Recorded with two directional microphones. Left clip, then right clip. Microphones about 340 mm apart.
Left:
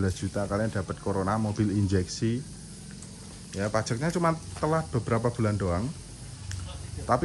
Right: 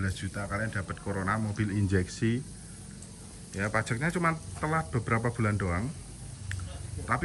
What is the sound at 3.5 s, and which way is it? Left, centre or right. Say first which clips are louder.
Speech: left 2 dB; centre.